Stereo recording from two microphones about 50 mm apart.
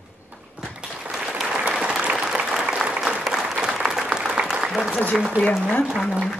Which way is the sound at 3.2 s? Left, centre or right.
Centre.